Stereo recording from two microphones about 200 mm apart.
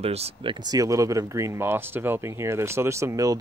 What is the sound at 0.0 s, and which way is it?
Speech, 30° right (ahead or behind).